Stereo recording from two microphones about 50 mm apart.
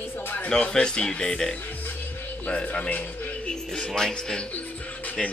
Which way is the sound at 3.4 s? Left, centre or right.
Centre.